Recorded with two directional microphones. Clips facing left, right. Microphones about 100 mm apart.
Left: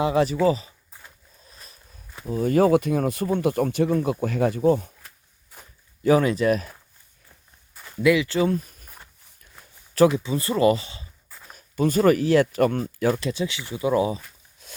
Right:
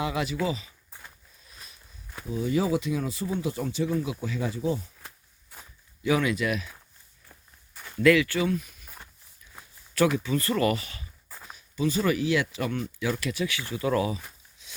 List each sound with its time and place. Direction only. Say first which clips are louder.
0.0 s speech: left 8 dB; 35° left (ahead or behind)
0.9 s sniff: even; 5° left (ahead or behind)
1.5 s a sound: left 1 dB; 40° left (ahead or behind)
2.2 s speech: left 7 dB; 50° left (ahead or behind)
6.0 s speech: left 6 dB; 40° left (ahead or behind)
7.7 s a sound: left 1 dB; 10° left (ahead or behind)
8.4 s speech: left 5 dB; 40° left (ahead or behind)
9.9 s speech: left 6 dB; 35° left (ahead or behind)
10.2 s speech: left 5 dB; 20° left (ahead or behind)
11.5 s speech: left 5 dB; 50° left (ahead or behind)
13.1 s speech: left 3 dB; 25° left (ahead or behind)
14.6 s a sound: left 6 dB; 50° left (ahead or behind)